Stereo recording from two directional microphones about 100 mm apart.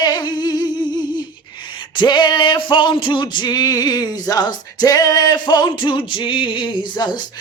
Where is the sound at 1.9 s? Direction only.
50° left (ahead or behind).